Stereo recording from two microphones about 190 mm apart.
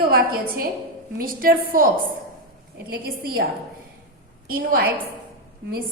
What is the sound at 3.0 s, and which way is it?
Speech, 50° right (ahead or behind).